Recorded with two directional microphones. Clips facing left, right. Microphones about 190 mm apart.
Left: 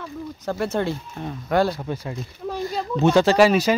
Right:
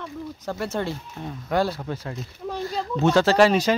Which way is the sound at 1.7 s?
15° left (ahead or behind).